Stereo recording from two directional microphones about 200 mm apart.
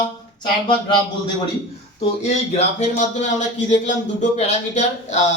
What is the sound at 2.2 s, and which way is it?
Speech, 35° left (ahead or behind).